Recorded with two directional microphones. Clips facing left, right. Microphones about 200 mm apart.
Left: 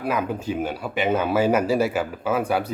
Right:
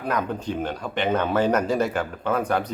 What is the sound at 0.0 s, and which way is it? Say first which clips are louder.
A man's voice: left 1 dB; 5° left (ahead or behind).